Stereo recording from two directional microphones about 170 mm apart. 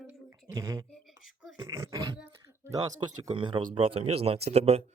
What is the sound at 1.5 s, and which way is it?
Beatboxing, 15° right (ahead or behind).